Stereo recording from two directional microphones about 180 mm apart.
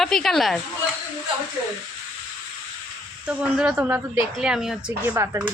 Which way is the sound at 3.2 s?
5° right (ahead or behind).